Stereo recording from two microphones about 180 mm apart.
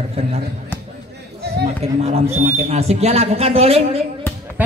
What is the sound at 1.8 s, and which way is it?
A woman's voice, 35° right (ahead or behind).